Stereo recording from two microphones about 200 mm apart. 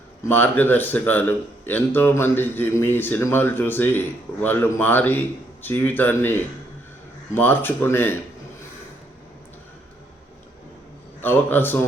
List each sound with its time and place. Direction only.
0.3 s speech: 10° left (ahead or behind)
11.2 s speech: 10° left (ahead or behind)